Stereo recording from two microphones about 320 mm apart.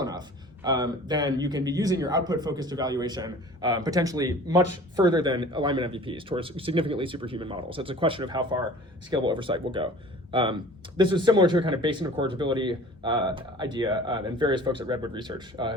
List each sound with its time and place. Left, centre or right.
0.0 s speech: centre